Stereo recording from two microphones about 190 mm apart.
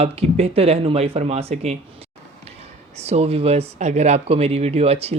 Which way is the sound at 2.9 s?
35° right (ahead or behind).